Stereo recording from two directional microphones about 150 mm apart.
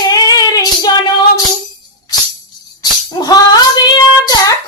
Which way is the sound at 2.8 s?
25° left (ahead or behind).